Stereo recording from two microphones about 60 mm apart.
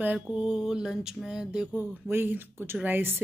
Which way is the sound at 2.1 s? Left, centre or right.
Right.